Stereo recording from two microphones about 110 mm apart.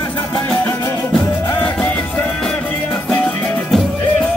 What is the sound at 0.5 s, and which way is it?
Music, 25° left (ahead or behind).